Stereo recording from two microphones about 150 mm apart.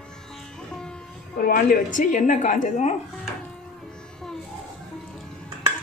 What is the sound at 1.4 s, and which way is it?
A woman's voice, 65° left (ahead or behind).